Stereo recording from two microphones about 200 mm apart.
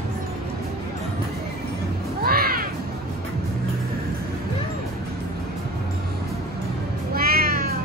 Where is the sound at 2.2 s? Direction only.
50° right (ahead or behind).